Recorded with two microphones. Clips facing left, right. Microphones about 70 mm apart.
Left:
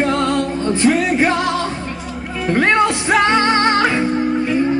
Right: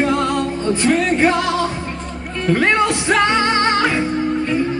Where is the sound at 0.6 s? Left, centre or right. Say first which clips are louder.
Left 1 dB; centre.